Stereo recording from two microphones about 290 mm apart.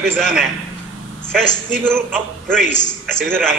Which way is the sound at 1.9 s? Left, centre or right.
Centre.